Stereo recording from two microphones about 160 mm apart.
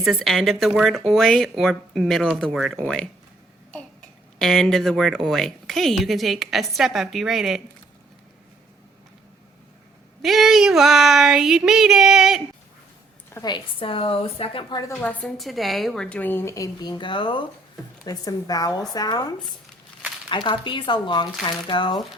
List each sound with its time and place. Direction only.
0.0 s speech: centre (ahead or behind)
4.4 s speech: 5° left (ahead or behind)
10.2 s speech: centre (ahead or behind)
13.3 s a woman's voice: 25° left (ahead or behind)
15.0 s a woman's voice: 5° left (ahead or behind); by 19.3 s 25° left (ahead or behind)
20.3 s speech: 30° left (ahead or behind)